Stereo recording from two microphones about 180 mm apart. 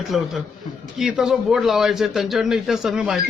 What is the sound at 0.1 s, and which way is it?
A man's voice, 5° right (ahead or behind).